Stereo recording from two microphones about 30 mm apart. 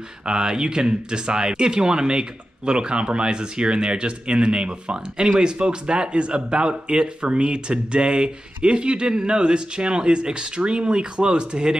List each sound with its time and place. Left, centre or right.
0.2 s speech: right